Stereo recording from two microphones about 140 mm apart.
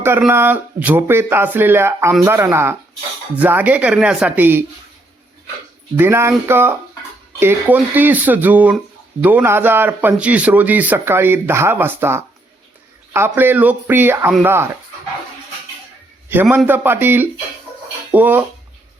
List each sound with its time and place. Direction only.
0.0 s a man's voice: 15° right (ahead or behind)
6.0 s a man's voice: 15° right (ahead or behind)
16.3 s a man's voice: 15° right (ahead or behind)